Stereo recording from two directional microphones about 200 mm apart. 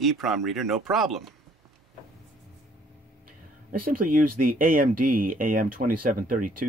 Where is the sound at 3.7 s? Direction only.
45° right (ahead or behind).